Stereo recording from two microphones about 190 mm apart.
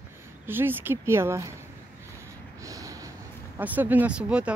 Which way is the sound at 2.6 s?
15° right (ahead or behind).